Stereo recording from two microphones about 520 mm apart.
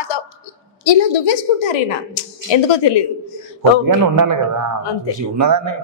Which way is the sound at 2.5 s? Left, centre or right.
Left.